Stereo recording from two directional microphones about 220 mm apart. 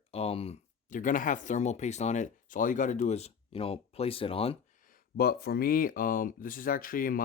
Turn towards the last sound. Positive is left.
turn(degrees=40)  # may be behind; listen again after turning